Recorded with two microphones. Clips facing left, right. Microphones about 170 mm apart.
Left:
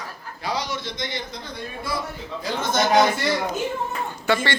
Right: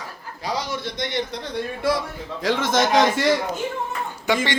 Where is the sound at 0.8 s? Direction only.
65° right (ahead or behind); by 2.8 s 90° right.